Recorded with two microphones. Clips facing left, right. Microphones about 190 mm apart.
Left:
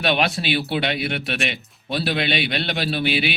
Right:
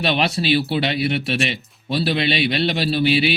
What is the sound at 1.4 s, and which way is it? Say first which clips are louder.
A man's voice: right 3 dB; centre (ahead or behind).